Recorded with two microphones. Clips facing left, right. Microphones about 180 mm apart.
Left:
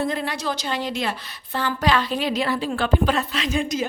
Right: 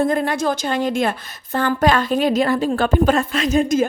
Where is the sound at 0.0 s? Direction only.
50° right (ahead or behind).